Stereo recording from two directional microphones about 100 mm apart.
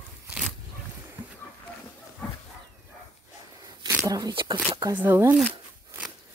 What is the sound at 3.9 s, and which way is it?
Speech, 35° right (ahead or behind).